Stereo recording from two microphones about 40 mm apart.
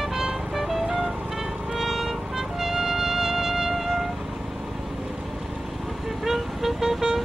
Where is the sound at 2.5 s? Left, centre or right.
Centre.